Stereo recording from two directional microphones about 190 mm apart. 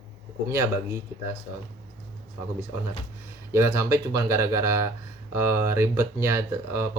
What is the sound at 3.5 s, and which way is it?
Speech, 15° right (ahead or behind).